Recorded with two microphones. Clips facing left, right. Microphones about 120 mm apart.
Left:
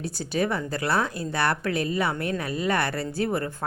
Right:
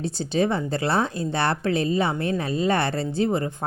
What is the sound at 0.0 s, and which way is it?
A woman's voice, 25° right (ahead or behind).